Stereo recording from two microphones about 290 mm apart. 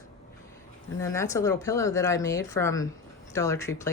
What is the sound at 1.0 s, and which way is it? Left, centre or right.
Speech, centre.